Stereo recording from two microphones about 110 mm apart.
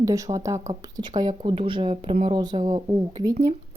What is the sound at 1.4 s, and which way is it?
Speech, 55° right (ahead or behind).